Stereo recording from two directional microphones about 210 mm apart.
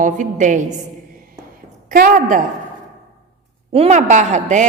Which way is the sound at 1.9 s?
40° right (ahead or behind).